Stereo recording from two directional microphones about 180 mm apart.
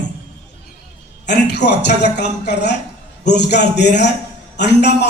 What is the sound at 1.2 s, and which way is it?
Speech, 70° left (ahead or behind).